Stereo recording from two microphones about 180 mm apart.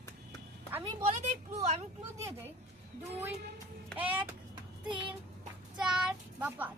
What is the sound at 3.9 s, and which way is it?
Speech, 10° right (ahead or behind).